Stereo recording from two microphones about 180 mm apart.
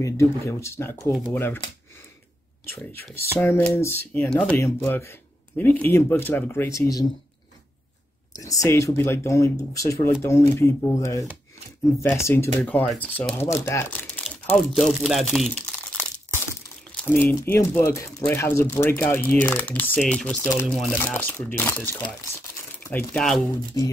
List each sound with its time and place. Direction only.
0.0 s speech: 15° left (ahead or behind)
2.6 s speech: 10° left (ahead or behind)
8.3 s speech: 20° left (ahead or behind)
12.5 s speech: 10° left (ahead or behind)
23.8 s speech: 20° left (ahead or behind)